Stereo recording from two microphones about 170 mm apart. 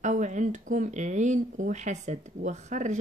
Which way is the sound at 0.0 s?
45° right (ahead or behind).